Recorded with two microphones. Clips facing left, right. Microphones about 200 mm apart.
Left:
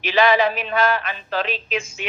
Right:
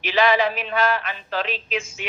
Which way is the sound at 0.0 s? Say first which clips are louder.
Left 2 dB; 45° left (ahead or behind).